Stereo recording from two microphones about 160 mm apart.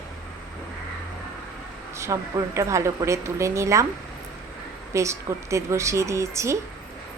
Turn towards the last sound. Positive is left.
turn(degrees=-20)  # may be behind; listen again after turning